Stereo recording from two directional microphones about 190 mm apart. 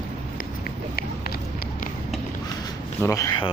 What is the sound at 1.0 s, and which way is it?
Run, 50° left (ahead or behind).